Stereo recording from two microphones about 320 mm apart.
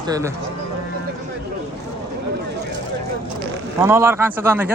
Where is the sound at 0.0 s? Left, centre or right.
Centre.